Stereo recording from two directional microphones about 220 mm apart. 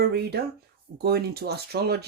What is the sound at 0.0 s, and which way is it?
Speech, 45° right (ahead or behind).